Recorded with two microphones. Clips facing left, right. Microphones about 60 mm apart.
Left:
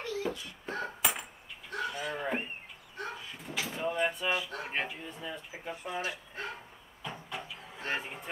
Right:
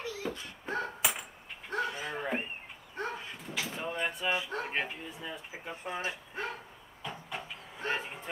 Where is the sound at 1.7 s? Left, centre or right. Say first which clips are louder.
Right 1 dB; right.